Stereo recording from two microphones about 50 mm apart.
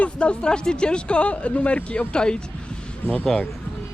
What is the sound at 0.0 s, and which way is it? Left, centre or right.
Speech, left.